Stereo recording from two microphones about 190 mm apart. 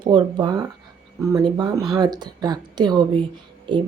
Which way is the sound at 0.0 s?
25° right (ahead or behind).